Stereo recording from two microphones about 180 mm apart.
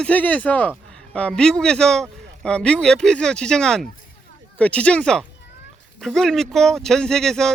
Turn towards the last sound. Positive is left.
turn(degrees=5)  # may be behind; listen again after turning